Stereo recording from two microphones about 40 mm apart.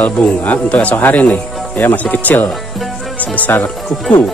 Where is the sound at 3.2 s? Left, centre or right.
Left.